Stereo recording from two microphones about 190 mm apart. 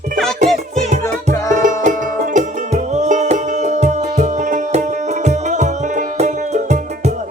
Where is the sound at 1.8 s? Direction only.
40° right (ahead or behind).